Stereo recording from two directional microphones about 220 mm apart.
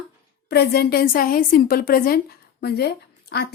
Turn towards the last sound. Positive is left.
turn(degrees=45)  # may be behind; listen again after turning